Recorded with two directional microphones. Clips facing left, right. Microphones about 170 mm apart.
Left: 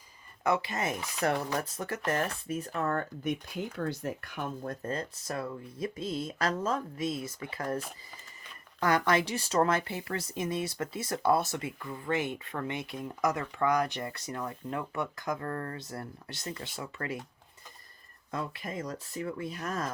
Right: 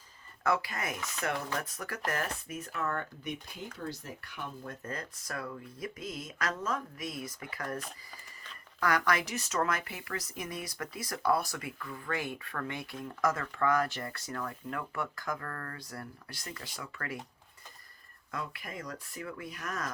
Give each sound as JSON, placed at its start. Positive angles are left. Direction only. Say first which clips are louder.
{"t": 0.4, "sound": "speech", "louder": "left 2 dB", "side_deg": 20}
{"t": 1.2, "sound": "speech", "louder": "left 5 dB", "side_deg": 40}
{"t": 3.8, "sound": "speech", "louder": "left 7 dB", "side_deg": 60}
{"t": 8.8, "sound": "speech", "louder": "left 3 dB", "side_deg": 25}
{"t": 18.3, "sound": "speech", "louder": "left 4 dB", "side_deg": 25}